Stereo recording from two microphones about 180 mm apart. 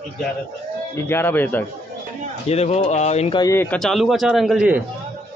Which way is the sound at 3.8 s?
Centre (ahead or behind).